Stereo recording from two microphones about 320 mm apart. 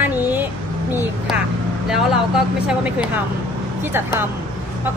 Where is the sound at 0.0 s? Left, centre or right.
Centre.